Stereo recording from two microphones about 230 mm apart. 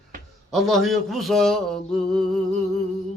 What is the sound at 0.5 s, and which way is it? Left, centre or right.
Mantra, centre.